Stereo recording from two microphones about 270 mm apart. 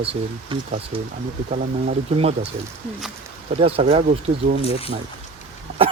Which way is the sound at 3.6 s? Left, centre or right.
Right.